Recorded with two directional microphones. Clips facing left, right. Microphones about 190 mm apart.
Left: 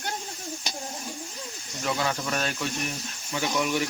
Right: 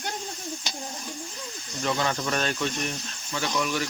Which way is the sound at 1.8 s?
5° left (ahead or behind).